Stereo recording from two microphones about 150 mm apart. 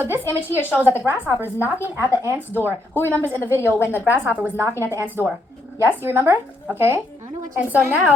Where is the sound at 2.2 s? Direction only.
15° right (ahead or behind).